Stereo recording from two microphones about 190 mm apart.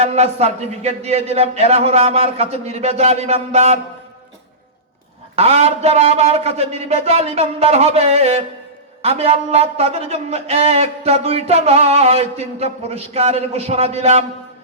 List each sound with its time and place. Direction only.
0.0 s speech: 35° right (ahead or behind)
5.4 s speech: 35° right (ahead or behind)